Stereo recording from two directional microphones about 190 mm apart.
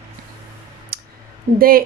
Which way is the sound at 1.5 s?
50° right (ahead or behind).